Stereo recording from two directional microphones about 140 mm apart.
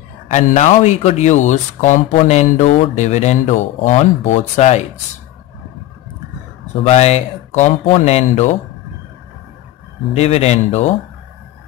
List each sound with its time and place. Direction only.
0.3 s speech: 60° left (ahead or behind)
6.9 s speech: 50° left (ahead or behind)
10.1 s speech: 45° left (ahead or behind)